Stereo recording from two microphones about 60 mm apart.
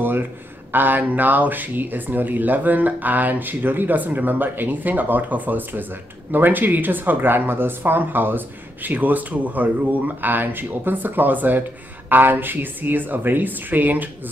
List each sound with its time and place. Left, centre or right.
0.7 s speech: right